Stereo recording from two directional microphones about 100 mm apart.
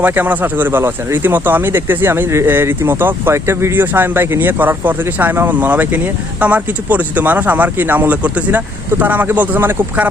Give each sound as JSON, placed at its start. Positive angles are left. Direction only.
{"t": 0.0, "sound": "speech", "side_deg": -20}